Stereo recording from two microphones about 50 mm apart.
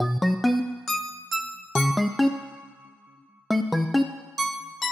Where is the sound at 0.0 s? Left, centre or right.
Centre.